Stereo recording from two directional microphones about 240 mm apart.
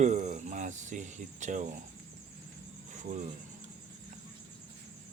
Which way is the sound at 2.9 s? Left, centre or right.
Right.